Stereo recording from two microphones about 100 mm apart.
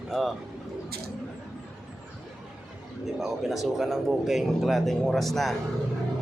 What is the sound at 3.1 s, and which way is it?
Speech, 5° right (ahead or behind).